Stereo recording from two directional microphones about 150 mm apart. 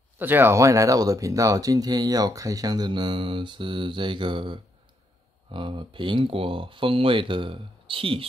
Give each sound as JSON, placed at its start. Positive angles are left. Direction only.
{"t": 0.2, "sound": "speech", "side_deg": -15}